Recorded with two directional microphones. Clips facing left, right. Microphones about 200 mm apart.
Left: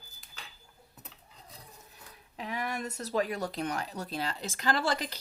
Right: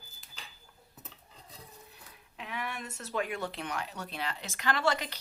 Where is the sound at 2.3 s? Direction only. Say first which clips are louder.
Left 4 dB; 40° left (ahead or behind).